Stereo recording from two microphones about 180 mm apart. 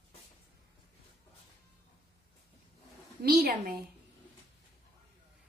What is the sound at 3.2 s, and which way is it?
Speech, 60° right (ahead or behind).